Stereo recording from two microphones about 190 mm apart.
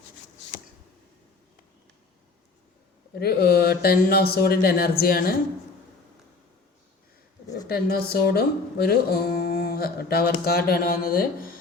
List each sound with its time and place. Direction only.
3.2 s speech: 55° left (ahead or behind)
7.7 s speech: 55° left (ahead or behind)